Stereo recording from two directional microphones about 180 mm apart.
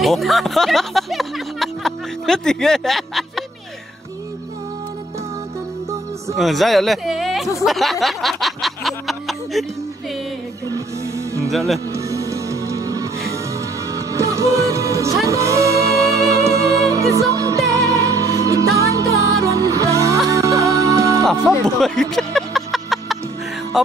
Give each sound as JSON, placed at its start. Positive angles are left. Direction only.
{"t": 0.0, "sound": "speech", "side_deg": 0}
{"t": 6.3, "sound": "speech", "side_deg": 0}
{"t": 7.6, "sound": "snicker", "side_deg": 0}
{"t": 11.5, "sound": "speech", "side_deg": 0}
{"t": 11.9, "sound": "music", "side_deg": -15}
{"t": 21.5, "sound": "music", "side_deg": 0}